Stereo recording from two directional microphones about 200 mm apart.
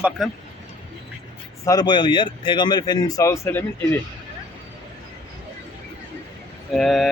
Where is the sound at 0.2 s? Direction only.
Centre (ahead or behind).